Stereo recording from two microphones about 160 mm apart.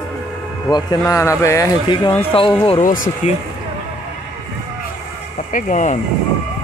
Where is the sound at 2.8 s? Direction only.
55° left (ahead or behind).